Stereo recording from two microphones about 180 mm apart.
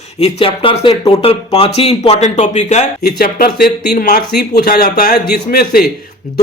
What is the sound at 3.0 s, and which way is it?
Speech, 60° left (ahead or behind).